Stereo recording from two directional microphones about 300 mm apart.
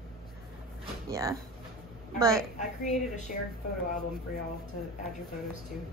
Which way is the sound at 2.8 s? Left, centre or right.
Left.